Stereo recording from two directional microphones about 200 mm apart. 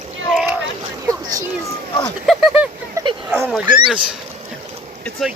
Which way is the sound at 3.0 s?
15° right (ahead or behind).